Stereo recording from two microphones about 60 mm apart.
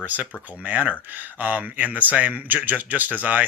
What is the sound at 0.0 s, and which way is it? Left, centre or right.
Speech, right.